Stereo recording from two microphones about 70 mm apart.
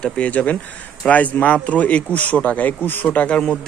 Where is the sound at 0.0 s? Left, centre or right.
Centre.